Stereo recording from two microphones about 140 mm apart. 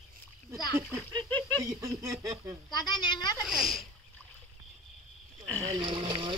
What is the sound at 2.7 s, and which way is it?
Speech, 30° left (ahead or behind).